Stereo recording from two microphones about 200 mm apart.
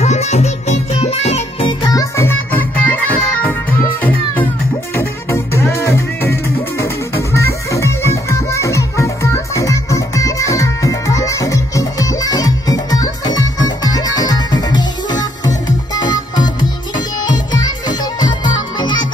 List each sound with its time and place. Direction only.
0.0 s music: 35° left (ahead or behind)